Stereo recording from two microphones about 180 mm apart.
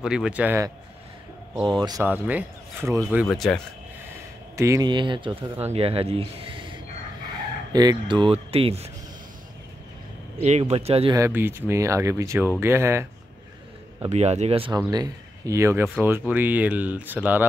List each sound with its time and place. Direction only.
0.0 s speech: 5° right (ahead or behind)
1.8 s speech: 20° right (ahead or behind)
2.0 s speech: 10° right (ahead or behind)
3.3 s speech: 5° left (ahead or behind)
4.6 s speech: 20° right (ahead or behind)
7.7 s speech: 20° right (ahead or behind)
10.4 s speech: 35° right (ahead or behind)
11.1 s speech: 15° right (ahead or behind)
14.0 s speech: 35° right (ahead or behind)
14.9 s speech: 20° right (ahead or behind)